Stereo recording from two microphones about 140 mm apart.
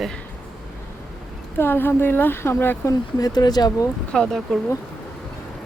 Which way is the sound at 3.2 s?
30° left (ahead or behind).